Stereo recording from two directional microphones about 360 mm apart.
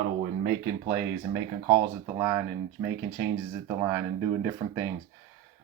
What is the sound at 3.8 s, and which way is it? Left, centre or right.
Speech, centre.